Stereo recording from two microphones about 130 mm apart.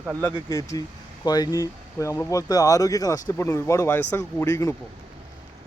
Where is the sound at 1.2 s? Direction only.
30° left (ahead or behind).